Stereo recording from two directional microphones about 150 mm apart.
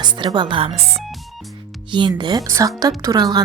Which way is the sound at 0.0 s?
30° right (ahead or behind).